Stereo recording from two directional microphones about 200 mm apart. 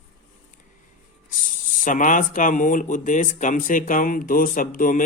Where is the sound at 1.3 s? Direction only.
40° left (ahead or behind).